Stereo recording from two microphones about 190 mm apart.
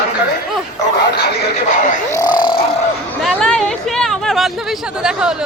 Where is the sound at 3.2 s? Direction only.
5° left (ahead or behind).